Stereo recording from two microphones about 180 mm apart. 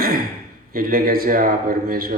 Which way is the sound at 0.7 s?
55° right (ahead or behind).